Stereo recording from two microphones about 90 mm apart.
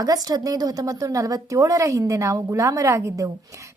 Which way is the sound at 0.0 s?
45° right (ahead or behind).